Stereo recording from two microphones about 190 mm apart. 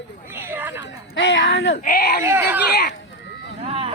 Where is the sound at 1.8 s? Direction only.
55° left (ahead or behind).